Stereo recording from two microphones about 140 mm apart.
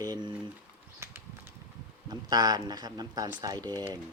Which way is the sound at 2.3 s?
30° right (ahead or behind).